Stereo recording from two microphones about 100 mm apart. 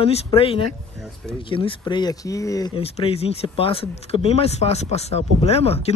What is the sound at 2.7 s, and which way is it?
Speech, 70° left (ahead or behind).